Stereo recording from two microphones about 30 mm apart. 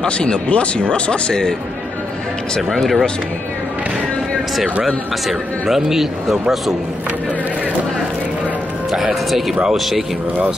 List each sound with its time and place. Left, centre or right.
0.0 s speech: left
0.5 s speech: left
2.7 s speech: centre
5.7 s a man's voice: centre
9.8 s speech: centre